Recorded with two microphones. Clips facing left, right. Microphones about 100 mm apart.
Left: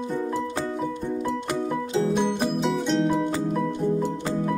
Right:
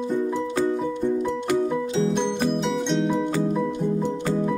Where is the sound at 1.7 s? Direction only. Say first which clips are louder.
Right 1 dB; 5° left (ahead or behind).